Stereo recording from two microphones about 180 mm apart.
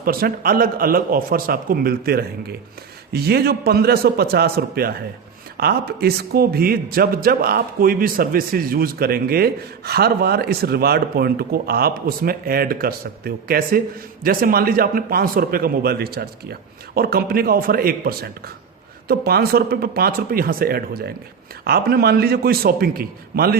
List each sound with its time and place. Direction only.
0.0 s a man's voice: 55° right (ahead or behind)